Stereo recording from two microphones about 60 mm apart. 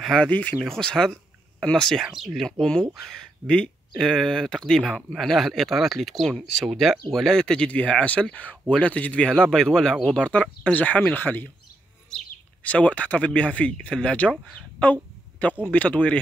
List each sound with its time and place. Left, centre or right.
0.0 s speech: centre
0.3 s speech: left
0.7 s speech: centre
2.0 s speech: centre
2.6 s speech: centre
9.3 s speech: centre; by 11.4 s left
12.1 s bird: centre
12.6 s speech: left
14.8 s a sound: left
15.6 s speech: left